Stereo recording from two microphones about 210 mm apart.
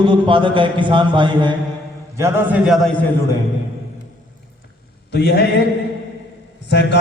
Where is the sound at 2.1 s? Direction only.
10° right (ahead or behind).